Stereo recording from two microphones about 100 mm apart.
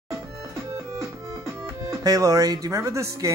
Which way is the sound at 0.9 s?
30° right (ahead or behind).